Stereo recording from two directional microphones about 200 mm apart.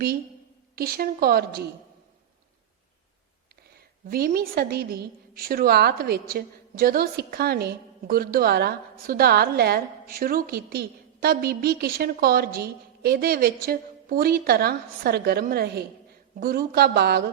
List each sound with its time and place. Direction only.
0.8 s a woman's voice: 50° right (ahead or behind)
4.0 s a woman's voice: 45° right (ahead or behind)